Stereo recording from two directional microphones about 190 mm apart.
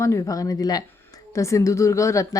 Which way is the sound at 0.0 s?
15° left (ahead or behind).